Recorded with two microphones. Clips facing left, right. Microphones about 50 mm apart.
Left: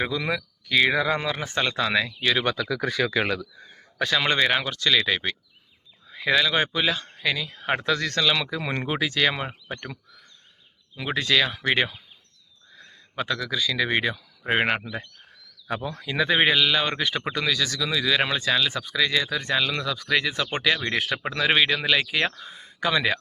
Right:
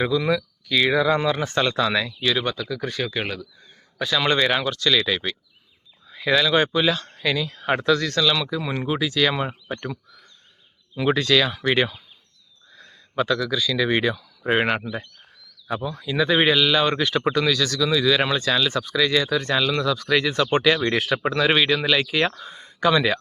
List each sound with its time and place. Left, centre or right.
0.0 s speech: left
1.2 s speech: centre
1.5 s speech: left
2.4 s speech: left
4.1 s speech: left
7.9 s speech: left
9.4 s speech: centre
11.1 s speech: centre
14.8 s speech: centre
15.9 s speech: left
16.1 s speech: left
20.5 s speech: centre